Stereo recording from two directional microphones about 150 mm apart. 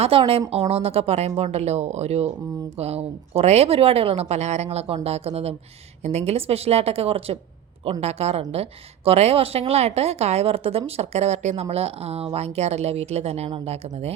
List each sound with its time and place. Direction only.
0.0 s a woman's voice: 40° right (ahead or behind)